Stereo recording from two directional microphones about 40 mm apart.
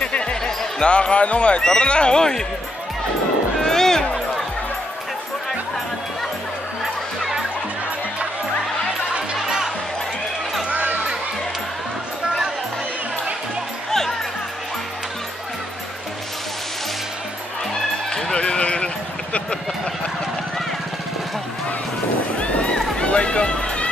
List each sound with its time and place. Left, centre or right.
0.0 s music: left
0.4 s speech: left
3.6 s music: centre
10.7 s a sound: right
18.1 s music: left
22.4 s run: left